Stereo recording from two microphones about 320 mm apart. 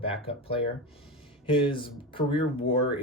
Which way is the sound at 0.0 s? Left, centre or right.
Centre.